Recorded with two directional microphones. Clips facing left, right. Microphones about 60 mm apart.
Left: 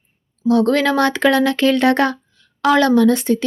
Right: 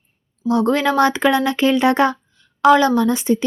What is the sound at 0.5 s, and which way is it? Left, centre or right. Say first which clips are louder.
Speech: left 1 dB; centre.